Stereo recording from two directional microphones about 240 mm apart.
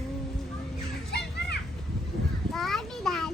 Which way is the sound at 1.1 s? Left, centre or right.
Left.